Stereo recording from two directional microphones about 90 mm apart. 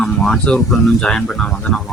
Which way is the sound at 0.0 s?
5° left (ahead or behind).